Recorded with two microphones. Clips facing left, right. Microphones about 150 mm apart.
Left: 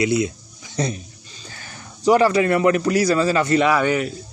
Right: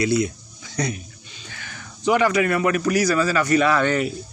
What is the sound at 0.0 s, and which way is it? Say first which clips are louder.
Speech: left 1 dB; 20° left (ahead or behind).